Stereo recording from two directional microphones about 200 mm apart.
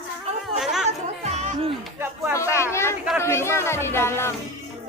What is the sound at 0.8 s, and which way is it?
Music, 35° right (ahead or behind).